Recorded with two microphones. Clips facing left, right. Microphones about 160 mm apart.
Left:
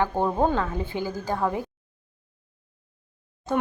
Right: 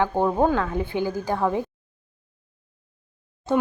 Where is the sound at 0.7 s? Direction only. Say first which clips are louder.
Right 4 dB; 15° right (ahead or behind).